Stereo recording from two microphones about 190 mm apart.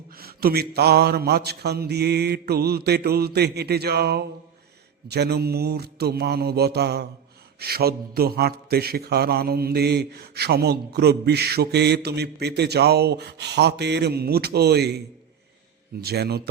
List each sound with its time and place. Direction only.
0.1 s a man's voice: 50° right (ahead or behind)
16.0 s a man's voice: 55° right (ahead or behind)